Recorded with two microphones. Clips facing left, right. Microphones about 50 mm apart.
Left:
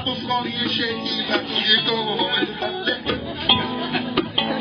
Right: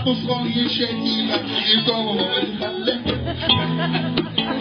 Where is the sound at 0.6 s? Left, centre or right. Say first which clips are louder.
Right 1 dB; left.